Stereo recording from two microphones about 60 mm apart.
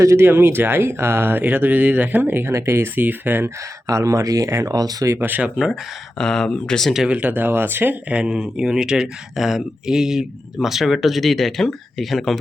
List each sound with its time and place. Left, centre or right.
0.0 s speech: right
0.3 s speech: right
3.8 s speech: right
6.1 s speech: centre
7.1 s speech: right
8.1 s speech: centre